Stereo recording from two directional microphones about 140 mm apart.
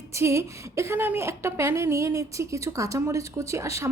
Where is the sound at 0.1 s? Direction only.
20° right (ahead or behind).